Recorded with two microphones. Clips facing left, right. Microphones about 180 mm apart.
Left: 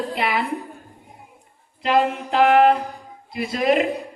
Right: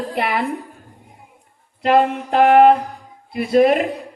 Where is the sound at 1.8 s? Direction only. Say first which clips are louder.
Right 4 dB; 55° right (ahead or behind).